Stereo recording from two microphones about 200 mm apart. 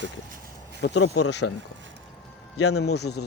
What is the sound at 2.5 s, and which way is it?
Speech, 75° left (ahead or behind).